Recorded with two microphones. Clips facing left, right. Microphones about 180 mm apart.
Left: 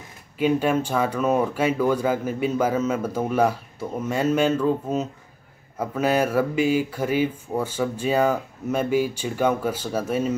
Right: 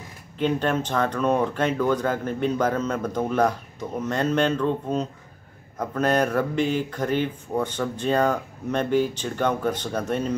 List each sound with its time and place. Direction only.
0.4 s speech: 10° left (ahead or behind)